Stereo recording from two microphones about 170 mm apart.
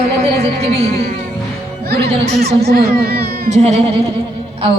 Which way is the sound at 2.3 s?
70° right (ahead or behind).